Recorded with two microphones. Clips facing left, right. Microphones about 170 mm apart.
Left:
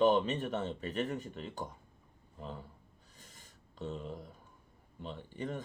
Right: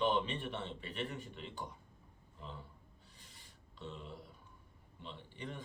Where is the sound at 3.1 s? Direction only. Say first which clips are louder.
Left 6 dB; 45° left (ahead or behind).